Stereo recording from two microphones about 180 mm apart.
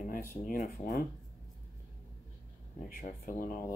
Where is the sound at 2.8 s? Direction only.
50° left (ahead or behind).